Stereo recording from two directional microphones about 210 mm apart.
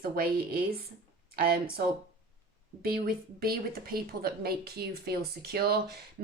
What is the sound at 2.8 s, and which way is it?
Speech, 45° right (ahead or behind).